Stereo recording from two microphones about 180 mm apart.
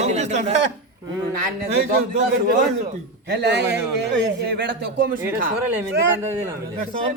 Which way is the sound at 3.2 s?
70° right (ahead or behind).